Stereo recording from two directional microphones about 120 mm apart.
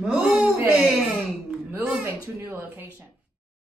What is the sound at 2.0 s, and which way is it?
Speech, 20° right (ahead or behind).